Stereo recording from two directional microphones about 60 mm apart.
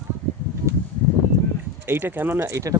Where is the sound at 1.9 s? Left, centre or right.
Right.